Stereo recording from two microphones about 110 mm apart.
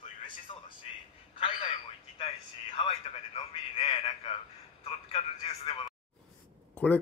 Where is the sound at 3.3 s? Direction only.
60° left (ahead or behind).